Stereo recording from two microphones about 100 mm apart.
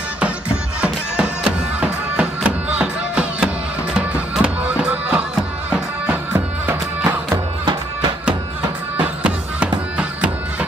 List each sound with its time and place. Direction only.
0.7 s music: 10° right (ahead or behind)
7.2 s music: 45° right (ahead or behind)
8.9 s music: 15° right (ahead or behind)